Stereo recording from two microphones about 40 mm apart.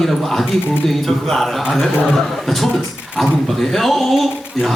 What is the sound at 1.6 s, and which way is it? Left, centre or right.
Speech, centre.